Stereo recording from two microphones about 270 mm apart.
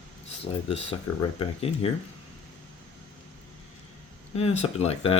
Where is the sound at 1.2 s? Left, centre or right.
Centre.